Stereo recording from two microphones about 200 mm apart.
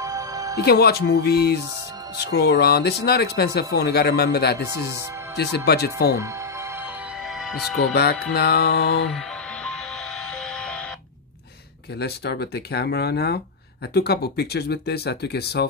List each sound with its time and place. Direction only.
0.0 s music: 15° right (ahead or behind)
0.6 s speech: 50° left (ahead or behind)
7.3 s speech: centre (ahead or behind)
7.9 s speech: 55° left (ahead or behind)
9.1 s music: 5° left (ahead or behind)
12.0 s speech: 55° left (ahead or behind)